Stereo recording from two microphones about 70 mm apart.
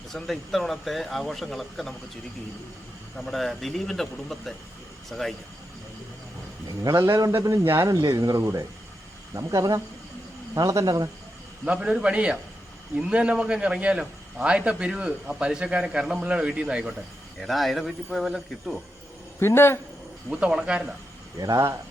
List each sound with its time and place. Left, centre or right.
0.1 s speech: centre
3.2 s speech: centre
6.7 s a man's voice: right
7.9 s a man's voice: right
11.6 s a man's voice: centre
17.4 s speech: centre
19.4 s speech: left
20.3 s a man's voice: centre
21.3 s speech: right